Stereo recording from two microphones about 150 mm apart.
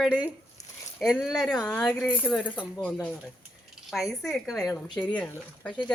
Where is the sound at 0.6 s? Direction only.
50° left (ahead or behind).